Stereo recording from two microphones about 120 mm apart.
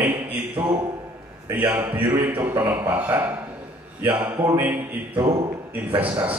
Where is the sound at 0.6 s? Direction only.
40° right (ahead or behind).